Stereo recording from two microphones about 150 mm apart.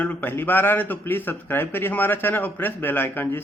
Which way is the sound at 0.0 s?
10° left (ahead or behind).